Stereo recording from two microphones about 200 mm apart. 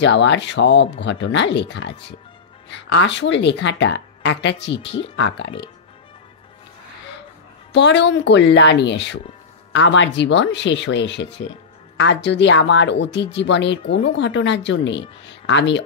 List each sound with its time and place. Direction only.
0.0 s a woman's voice: 65° left (ahead or behind)
7.7 s a woman's voice: 60° left (ahead or behind)